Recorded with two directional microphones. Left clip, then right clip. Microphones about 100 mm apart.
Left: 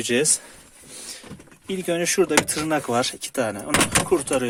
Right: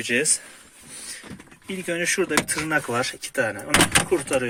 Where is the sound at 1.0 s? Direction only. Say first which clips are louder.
Even; 30° left (ahead or behind).